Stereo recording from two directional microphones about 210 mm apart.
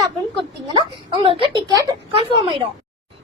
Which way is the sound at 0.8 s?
25° right (ahead or behind).